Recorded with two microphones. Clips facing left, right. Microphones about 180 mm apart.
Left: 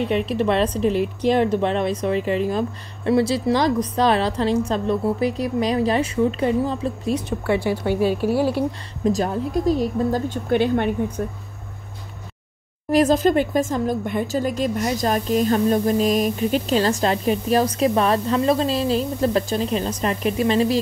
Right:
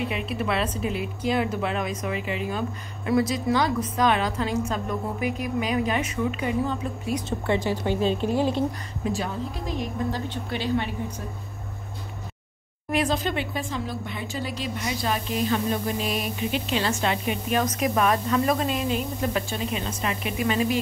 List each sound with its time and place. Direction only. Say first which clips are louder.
0.0 s speech: left 7 dB; 5° right (ahead or behind)
0.6 s speech: left 8 dB; 35° left (ahead or behind)
7.5 s a woman's voice: left 4 dB; 10° left (ahead or behind)
9.0 s a woman's voice: left 7 dB; 40° left (ahead or behind); by 11.2 s 55° left (ahead or behind)
12.9 s speech: left 9 dB; 45° left (ahead or behind)